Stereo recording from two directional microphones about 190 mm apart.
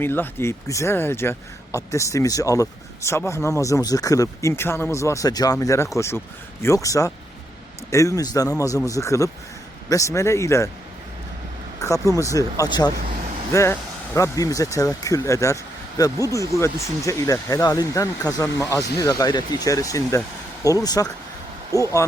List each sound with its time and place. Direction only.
0.0 s speech: 10° left (ahead or behind)
11.8 s speech: 15° left (ahead or behind)